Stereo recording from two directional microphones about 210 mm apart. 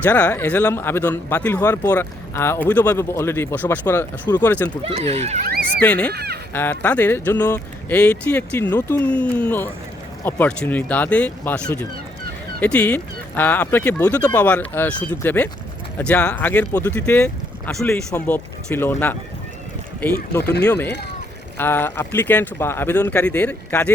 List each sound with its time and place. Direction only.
0.0 s speech: 5° left (ahead or behind)
4.8 s speech: 30° right (ahead or behind)
5.5 s speech: 45° right (ahead or behind)
5.8 s speech: 5° left (ahead or behind)
6.1 s speech: 50° right (ahead or behind)
6.5 s speech: 10° left (ahead or behind)
20.4 s speech: 55° left (ahead or behind)
21.6 s speech: 10° left (ahead or behind)